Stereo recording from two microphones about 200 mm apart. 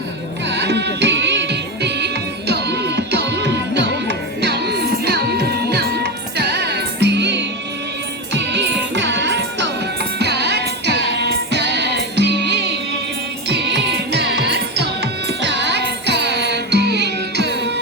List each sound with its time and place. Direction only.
0.5 s music: 55° right (ahead or behind)